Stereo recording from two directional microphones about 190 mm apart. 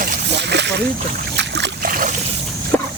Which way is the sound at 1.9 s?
45° right (ahead or behind).